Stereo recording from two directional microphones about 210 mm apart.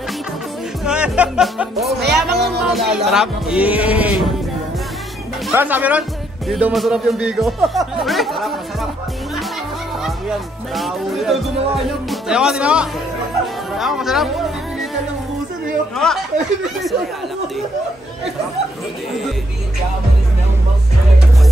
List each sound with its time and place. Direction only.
0.8 s music: 5° right (ahead or behind)
2.0 s music: 55° right (ahead or behind)
2.6 s speech: centre (ahead or behind)
5.5 s speech: 10° right (ahead or behind)
10.0 s speech: centre (ahead or behind)
16.0 s speech: 5° left (ahead or behind)